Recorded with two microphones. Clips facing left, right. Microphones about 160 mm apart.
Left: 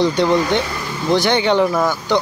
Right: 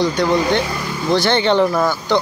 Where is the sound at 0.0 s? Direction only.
25° left (ahead or behind).